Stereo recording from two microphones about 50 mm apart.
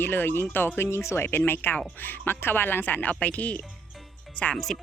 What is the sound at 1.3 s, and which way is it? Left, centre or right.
Speech, left.